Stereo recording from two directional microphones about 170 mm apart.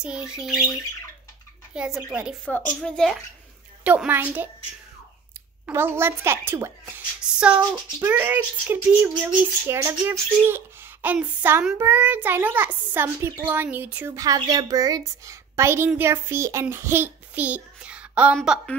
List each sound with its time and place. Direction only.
0.0 s a woman's voice: 5° right (ahead or behind)
1.7 s a woman's voice: 5° right (ahead or behind)
2.4 s a woman's voice: 5° left (ahead or behind)
3.8 s a child's voice: 10° right (ahead or behind)
5.7 s a child's voice: 15° right (ahead or behind)